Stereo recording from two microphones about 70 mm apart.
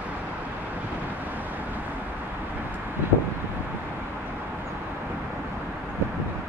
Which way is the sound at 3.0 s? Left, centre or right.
Right.